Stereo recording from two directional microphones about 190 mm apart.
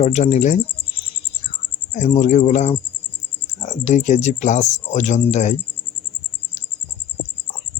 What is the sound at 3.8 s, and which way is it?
Speech, 35° left (ahead or behind).